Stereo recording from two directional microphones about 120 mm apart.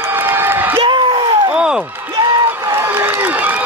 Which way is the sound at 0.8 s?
45° right (ahead or behind).